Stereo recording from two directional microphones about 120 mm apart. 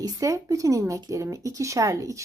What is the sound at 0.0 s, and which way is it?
Speech, 30° right (ahead or behind).